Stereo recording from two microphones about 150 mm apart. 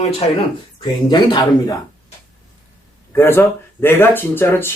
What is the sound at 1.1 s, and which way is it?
Speech, 25° left (ahead or behind).